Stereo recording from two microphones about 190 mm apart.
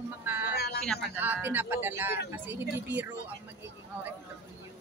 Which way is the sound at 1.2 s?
10° right (ahead or behind).